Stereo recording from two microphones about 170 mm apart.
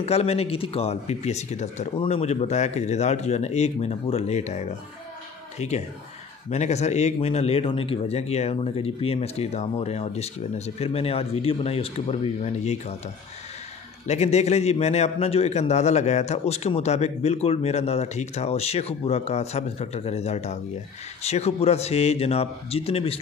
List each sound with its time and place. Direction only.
0.0 s a man's voice: 40° left (ahead or behind)
14.0 s a man's voice: 40° left (ahead or behind)